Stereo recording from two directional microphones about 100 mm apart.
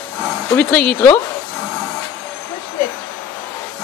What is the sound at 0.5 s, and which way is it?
Speech, 10° left (ahead or behind).